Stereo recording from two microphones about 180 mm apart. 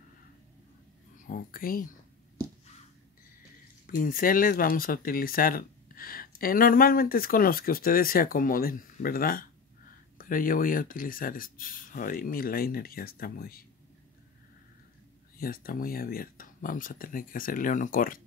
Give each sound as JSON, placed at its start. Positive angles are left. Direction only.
{"t": 1.2, "sound": "speech", "side_deg": 50}
{"t": 3.8, "sound": "speech", "side_deg": 50}
{"t": 15.3, "sound": "speech", "side_deg": 55}